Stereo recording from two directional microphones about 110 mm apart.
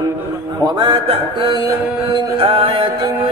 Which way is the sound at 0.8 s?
50° right (ahead or behind).